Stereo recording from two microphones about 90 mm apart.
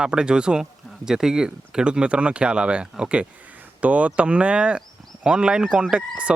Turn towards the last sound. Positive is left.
turn(degrees=-15)  # may be behind; listen again after turning